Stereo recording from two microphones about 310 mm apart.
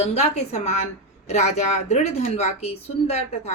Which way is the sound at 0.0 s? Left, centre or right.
Left.